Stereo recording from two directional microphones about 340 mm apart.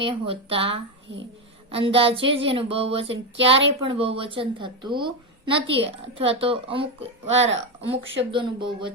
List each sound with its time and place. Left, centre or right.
0.0 s speech: centre
3.1 s speech: right
3.8 s speech: centre